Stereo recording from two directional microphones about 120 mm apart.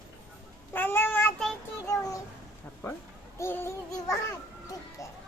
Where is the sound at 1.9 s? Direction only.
25° left (ahead or behind).